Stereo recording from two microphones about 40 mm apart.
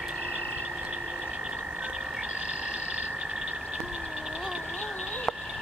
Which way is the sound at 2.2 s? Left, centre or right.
Right.